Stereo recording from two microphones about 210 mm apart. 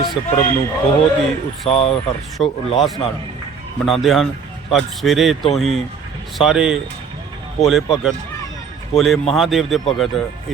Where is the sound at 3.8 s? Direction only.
Centre (ahead or behind).